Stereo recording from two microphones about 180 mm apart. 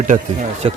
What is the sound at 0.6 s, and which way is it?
Speech, 30° right (ahead or behind).